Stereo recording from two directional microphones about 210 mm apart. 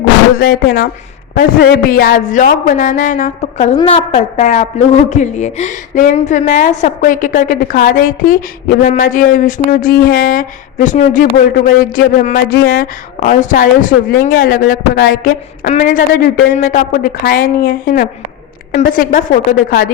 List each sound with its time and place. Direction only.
0.3 s a woman's voice: 45° left (ahead or behind)